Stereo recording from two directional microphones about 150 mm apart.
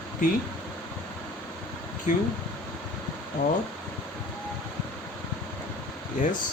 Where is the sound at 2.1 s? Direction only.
55° left (ahead or behind).